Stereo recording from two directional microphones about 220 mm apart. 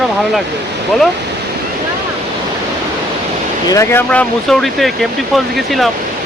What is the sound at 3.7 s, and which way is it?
Speech, 10° left (ahead or behind).